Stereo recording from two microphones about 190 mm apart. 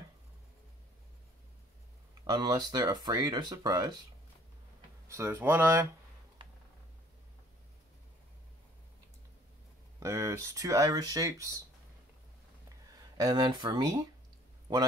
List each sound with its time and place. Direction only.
2.2 s speech: 20° right (ahead or behind)
5.0 s speech: 10° right (ahead or behind)
6.4 s a sound: 25° right (ahead or behind)
9.9 s speech: 15° right (ahead or behind)
13.2 s a man's voice: 20° right (ahead or behind)